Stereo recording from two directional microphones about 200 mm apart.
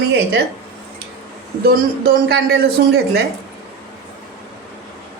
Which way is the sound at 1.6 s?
50° right (ahead or behind).